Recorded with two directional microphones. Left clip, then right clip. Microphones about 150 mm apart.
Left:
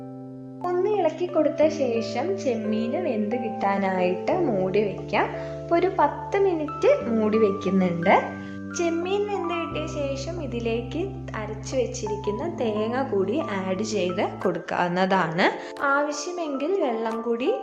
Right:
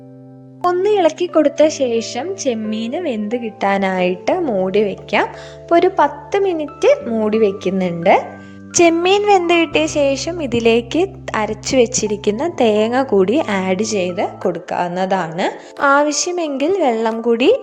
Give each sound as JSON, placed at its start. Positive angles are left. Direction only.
{"t": 0.6, "sound": "speech", "side_deg": -50}
{"t": 8.7, "sound": "a woman's voice", "side_deg": -90}
{"t": 14.2, "sound": "speech", "side_deg": -25}
{"t": 15.8, "sound": "a woman's voice", "side_deg": -85}